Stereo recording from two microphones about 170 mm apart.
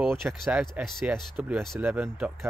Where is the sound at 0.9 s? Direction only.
Centre (ahead or behind).